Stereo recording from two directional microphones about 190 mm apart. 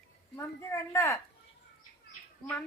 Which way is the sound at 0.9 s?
15° left (ahead or behind).